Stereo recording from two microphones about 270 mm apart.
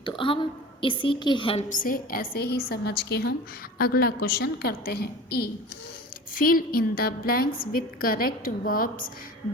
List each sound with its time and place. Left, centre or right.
0.0 s a woman's voice: centre